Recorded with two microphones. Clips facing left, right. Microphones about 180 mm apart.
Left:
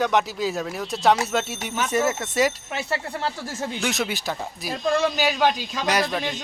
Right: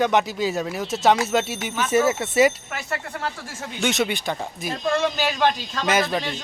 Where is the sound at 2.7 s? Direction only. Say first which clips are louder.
Left 2 dB; 30° left (ahead or behind).